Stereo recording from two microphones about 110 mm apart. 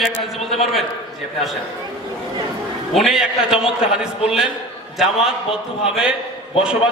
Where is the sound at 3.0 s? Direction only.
5° right (ahead or behind).